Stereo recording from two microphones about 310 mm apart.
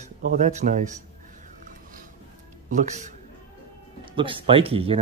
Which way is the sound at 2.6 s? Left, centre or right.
Right.